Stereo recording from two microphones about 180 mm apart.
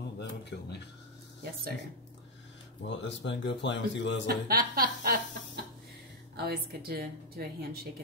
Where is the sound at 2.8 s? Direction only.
85° left.